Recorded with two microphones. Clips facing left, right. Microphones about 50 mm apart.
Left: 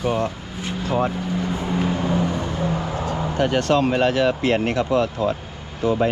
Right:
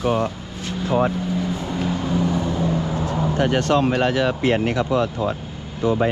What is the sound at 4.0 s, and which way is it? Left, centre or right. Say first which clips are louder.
Speech: left 1 dB; left.